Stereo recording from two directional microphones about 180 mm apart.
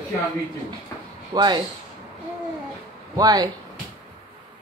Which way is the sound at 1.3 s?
25° right (ahead or behind).